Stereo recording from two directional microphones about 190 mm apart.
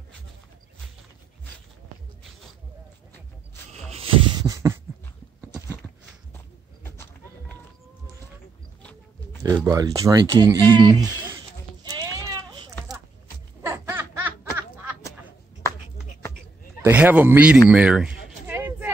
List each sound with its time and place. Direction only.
4.4 s beatboxing: 20° right (ahead or behind)
6.8 s a sound: 10° left (ahead or behind)
9.4 s speech: 20° right (ahead or behind)
11.8 s sheep: 20° right (ahead or behind)
13.6 s music: 10° right (ahead or behind)
16.8 s speech: 10° right (ahead or behind)
17.6 s a sound: 5° right (ahead or behind)